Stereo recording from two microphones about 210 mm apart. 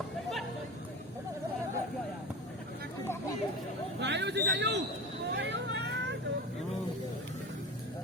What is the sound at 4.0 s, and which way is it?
Speech, 55° right (ahead or behind).